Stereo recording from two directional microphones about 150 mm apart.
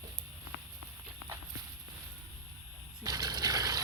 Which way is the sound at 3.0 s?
25° right (ahead or behind).